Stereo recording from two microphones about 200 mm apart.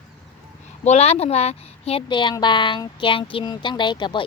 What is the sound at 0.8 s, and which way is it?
A child's voice, 30° left (ahead or behind).